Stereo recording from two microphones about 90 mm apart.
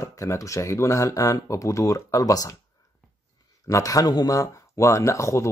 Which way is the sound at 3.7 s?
40° left (ahead or behind).